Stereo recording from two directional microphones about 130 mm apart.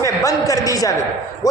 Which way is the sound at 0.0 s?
25° left (ahead or behind).